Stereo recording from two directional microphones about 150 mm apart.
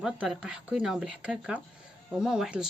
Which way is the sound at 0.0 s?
5° right (ahead or behind).